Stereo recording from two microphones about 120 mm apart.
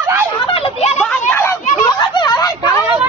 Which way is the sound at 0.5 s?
60° left (ahead or behind).